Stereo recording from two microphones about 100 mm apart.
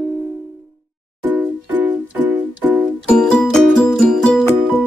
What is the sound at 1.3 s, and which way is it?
Music, 15° right (ahead or behind).